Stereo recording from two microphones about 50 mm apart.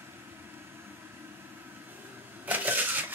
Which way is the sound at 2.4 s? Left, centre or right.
Right.